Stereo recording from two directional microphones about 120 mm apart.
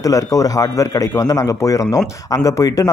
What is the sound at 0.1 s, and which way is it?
Speech, 30° left (ahead or behind).